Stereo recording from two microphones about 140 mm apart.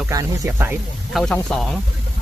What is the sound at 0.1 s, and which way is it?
Speech, 20° right (ahead or behind).